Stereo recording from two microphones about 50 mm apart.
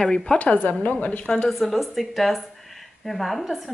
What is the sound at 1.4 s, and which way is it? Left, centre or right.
Speech, centre.